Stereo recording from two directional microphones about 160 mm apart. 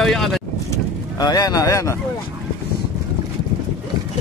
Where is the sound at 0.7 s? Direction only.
25° left (ahead or behind).